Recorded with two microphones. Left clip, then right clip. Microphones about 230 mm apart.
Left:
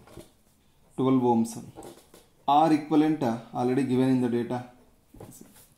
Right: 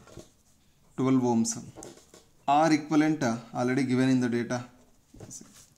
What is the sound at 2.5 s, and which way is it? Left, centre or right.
Speech, right.